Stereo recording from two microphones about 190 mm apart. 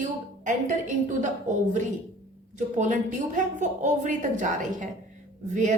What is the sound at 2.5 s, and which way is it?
A woman's voice, 40° right (ahead or behind).